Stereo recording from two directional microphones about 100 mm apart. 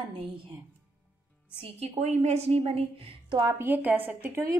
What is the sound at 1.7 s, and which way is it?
A woman's voice, 90° right.